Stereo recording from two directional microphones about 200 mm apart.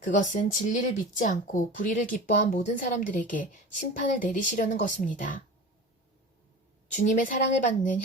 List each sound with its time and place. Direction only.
0.0 s speech: 40° left (ahead or behind)
6.9 s speech: 40° left (ahead or behind)